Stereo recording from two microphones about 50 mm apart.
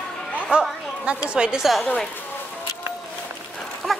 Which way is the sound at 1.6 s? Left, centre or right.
Centre.